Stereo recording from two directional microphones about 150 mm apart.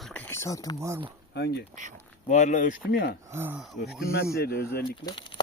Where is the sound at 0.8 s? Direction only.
20° right (ahead or behind).